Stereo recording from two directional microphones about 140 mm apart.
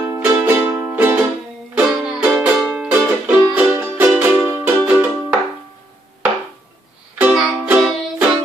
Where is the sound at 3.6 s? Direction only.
15° right (ahead or behind).